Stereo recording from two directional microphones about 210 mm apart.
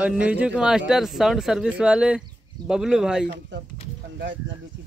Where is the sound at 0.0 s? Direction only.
5° right (ahead or behind).